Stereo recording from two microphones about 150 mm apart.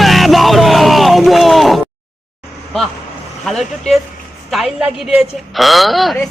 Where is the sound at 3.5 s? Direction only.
5° left (ahead or behind).